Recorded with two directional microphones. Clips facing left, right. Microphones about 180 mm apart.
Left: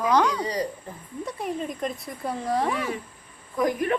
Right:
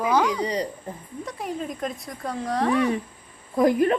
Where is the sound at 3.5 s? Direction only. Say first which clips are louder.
Right 5 dB; 30° right (ahead or behind).